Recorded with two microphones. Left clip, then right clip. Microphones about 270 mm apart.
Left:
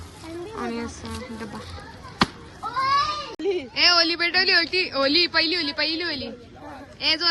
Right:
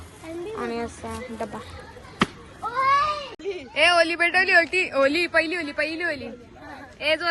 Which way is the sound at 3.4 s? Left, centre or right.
Left.